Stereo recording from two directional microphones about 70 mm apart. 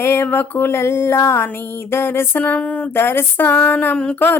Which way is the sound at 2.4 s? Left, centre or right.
Centre.